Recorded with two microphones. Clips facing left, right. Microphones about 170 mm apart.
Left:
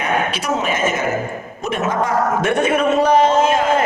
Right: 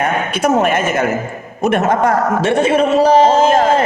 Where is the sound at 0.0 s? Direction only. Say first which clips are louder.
Right 4 dB; 55° right (ahead or behind).